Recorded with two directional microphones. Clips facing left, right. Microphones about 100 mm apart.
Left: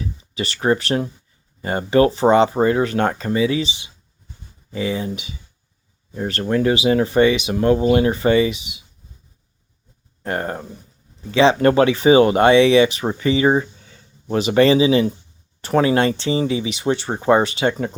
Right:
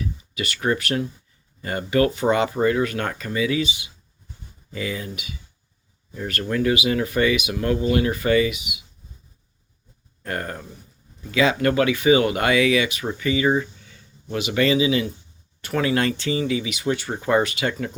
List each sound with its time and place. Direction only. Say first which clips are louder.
0.0 s speech: left 2 dB; 30° left (ahead or behind)
10.2 s speech: left 5 dB; 25° left (ahead or behind)